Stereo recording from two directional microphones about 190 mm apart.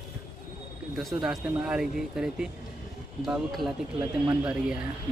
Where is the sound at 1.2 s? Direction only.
5° right (ahead or behind).